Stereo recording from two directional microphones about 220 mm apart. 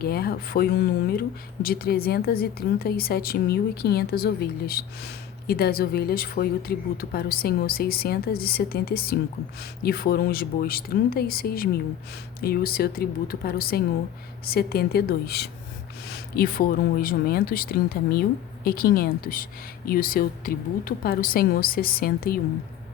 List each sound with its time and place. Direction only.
0.0 s speech: 45° left (ahead or behind)